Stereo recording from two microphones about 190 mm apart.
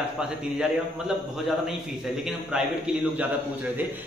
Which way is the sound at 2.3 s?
5° right (ahead or behind).